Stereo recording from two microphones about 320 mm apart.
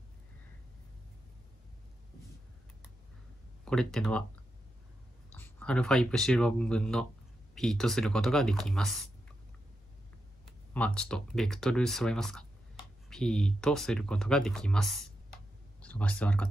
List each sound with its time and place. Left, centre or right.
3.6 s speech: centre
5.3 s speech: centre
10.7 s speech: centre